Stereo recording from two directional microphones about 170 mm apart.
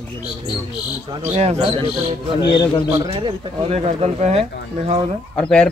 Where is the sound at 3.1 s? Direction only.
30° right (ahead or behind).